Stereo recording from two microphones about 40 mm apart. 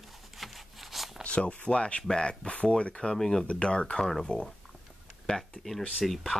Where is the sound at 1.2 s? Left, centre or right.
Left.